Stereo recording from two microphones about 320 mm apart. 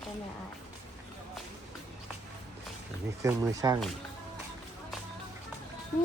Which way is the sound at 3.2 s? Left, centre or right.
Centre.